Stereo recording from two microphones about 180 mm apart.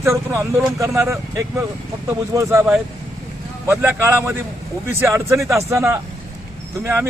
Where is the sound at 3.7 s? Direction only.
15° right (ahead or behind).